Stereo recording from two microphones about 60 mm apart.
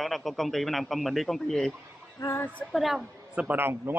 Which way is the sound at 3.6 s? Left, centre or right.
Right.